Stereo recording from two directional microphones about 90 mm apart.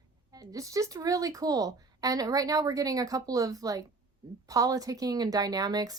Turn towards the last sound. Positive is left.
turn(degrees=-45)  # may be behind; listen again after turning